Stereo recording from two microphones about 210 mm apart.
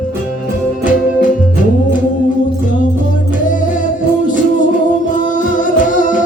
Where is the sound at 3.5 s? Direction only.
40° left (ahead or behind).